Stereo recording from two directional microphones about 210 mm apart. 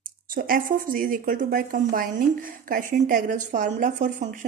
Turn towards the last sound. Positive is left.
turn(degrees=-35)  # may be behind; listen again after turning